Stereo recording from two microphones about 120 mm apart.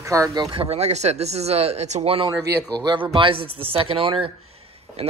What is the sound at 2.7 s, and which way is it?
Speech, 40° right (ahead or behind).